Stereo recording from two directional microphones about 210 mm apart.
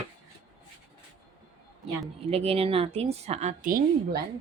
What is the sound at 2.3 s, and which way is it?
A woman's voice, 30° right (ahead or behind).